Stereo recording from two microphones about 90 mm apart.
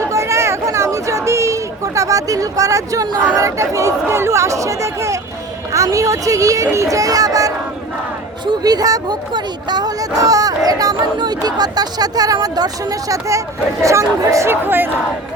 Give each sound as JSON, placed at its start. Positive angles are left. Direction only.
{"t": 0.0, "sound": "chatter", "side_deg": -35}
{"t": 3.3, "sound": "speech", "side_deg": -35}